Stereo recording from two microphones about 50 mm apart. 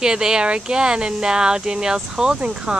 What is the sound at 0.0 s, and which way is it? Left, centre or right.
Speech, centre.